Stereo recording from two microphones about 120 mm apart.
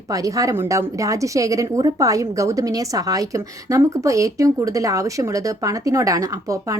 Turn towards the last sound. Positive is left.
turn(degrees=-30)  # may be behind; listen again after turning